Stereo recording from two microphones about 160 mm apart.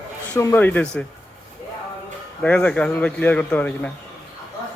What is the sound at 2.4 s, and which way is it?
Speech, 10° left (ahead or behind).